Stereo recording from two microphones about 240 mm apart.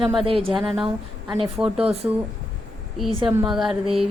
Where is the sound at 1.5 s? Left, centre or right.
Centre.